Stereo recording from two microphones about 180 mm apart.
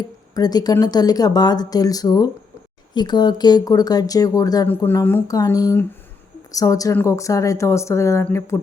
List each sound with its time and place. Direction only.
0.3 s speech: 20° left (ahead or behind)